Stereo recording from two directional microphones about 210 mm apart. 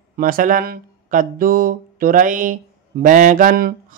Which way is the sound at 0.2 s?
40° right (ahead or behind).